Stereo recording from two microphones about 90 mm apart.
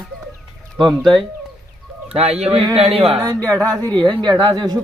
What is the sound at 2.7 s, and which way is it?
Speech, 90° right.